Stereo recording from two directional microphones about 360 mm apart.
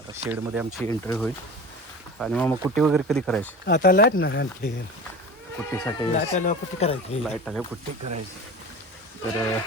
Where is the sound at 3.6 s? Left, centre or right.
Left.